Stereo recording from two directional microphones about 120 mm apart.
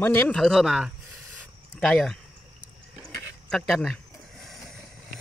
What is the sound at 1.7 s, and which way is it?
Speech, 5° left (ahead or behind).